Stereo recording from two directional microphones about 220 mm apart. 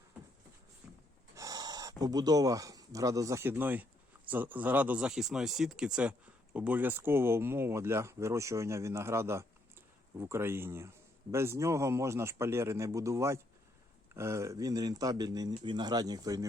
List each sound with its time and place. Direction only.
1.4 s speech: 15° right (ahead or behind)